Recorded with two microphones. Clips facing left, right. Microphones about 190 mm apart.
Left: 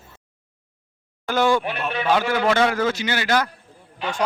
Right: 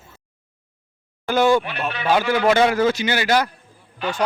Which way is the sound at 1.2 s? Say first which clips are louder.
Right 3 dB; centre (ahead or behind).